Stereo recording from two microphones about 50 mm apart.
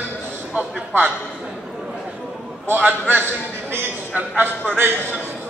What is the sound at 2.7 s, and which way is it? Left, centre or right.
A man's voice, right.